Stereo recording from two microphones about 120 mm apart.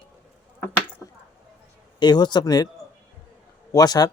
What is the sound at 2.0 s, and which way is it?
Speech, 35° left (ahead or behind).